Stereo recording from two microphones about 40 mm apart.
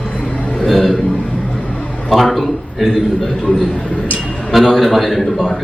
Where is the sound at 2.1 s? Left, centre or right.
Centre.